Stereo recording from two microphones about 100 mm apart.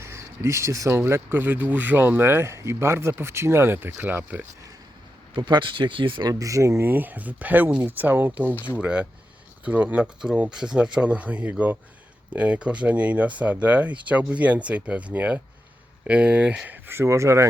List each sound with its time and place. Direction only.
0.0 s speech: 30° right (ahead or behind)
5.4 s speech: 50° right (ahead or behind)
6.2 s speech: 35° right (ahead or behind)